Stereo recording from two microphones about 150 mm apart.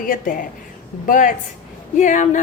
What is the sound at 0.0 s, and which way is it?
A woman's voice, 65° left (ahead or behind).